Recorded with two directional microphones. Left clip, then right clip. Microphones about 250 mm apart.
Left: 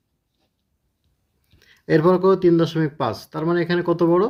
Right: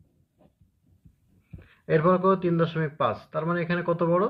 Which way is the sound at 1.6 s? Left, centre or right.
Left.